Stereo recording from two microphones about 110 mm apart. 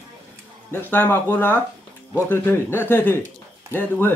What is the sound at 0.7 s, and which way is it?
Speech, 20° left (ahead or behind).